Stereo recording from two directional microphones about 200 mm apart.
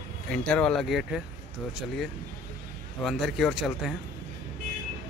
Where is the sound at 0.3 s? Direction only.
5° left (ahead or behind).